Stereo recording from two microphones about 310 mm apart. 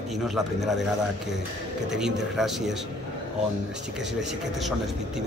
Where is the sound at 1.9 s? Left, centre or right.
Centre.